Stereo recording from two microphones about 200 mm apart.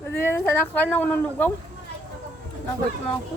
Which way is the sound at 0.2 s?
10° left (ahead or behind).